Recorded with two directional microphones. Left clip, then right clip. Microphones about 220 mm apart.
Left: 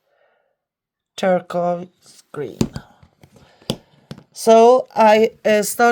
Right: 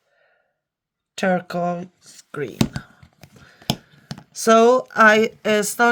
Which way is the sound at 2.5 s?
25° right (ahead or behind).